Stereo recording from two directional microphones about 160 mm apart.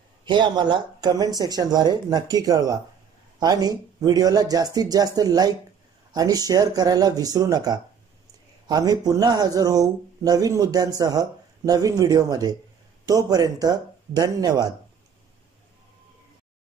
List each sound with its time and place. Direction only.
0.2 s speech: 30° right (ahead or behind)